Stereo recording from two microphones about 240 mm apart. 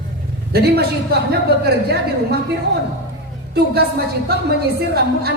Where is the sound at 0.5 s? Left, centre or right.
Right.